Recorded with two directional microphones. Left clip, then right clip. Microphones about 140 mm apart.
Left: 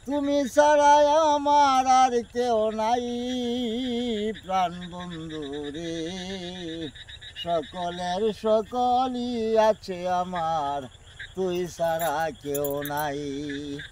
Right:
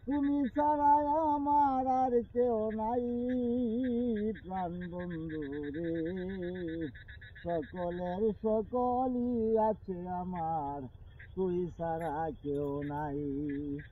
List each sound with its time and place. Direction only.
0.1 s a sound: 65° left (ahead or behind)
12.1 s wind chime: 85° left
12.7 s mantra: 45° left (ahead or behind)